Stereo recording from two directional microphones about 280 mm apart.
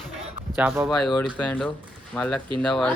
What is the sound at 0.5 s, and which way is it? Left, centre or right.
Speech, centre.